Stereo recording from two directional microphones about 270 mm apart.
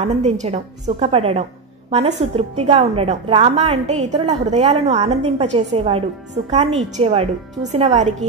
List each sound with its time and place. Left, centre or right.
0.0 s a woman's voice: right